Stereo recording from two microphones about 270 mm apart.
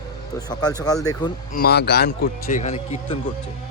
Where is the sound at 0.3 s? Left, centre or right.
Centre.